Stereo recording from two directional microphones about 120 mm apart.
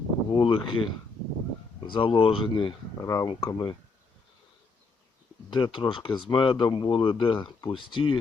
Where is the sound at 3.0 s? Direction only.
25° left (ahead or behind).